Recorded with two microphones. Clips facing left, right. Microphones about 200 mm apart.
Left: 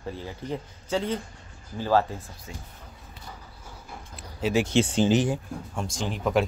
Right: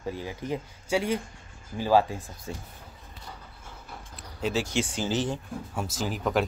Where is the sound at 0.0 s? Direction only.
15° right (ahead or behind).